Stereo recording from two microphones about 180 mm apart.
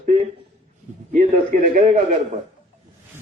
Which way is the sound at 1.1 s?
50° right (ahead or behind).